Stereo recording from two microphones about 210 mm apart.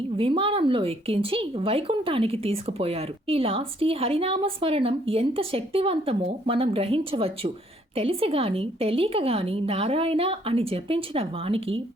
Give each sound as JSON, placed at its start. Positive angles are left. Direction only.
{"t": 0.2, "sound": "speech", "side_deg": -25}